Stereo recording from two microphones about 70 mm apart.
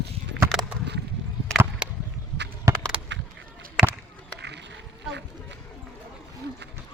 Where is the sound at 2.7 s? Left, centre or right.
Right.